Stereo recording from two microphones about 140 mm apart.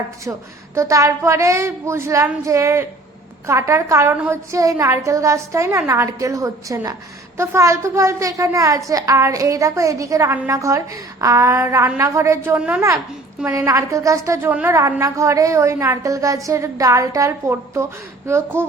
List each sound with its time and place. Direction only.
0.8 s a woman's voice: 20° right (ahead or behind)
12.5 s speech: 10° right (ahead or behind)
13.7 s a woman's voice: 25° right (ahead or behind)